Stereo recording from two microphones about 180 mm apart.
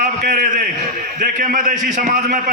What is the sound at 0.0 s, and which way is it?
A man's voice, 50° right (ahead or behind).